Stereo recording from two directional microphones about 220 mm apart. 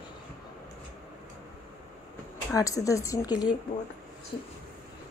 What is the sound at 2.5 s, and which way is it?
A woman's voice, 15° left (ahead or behind).